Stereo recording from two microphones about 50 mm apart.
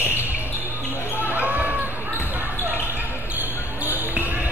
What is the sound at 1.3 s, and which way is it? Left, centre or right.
Basketball bounce, right.